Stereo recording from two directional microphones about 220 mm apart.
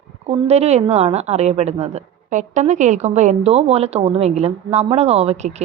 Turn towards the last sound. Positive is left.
turn(degrees=-30)  # may be behind; listen again after turning